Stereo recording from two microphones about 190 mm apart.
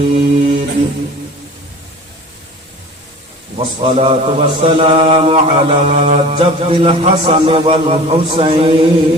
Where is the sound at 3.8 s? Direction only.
30° right (ahead or behind).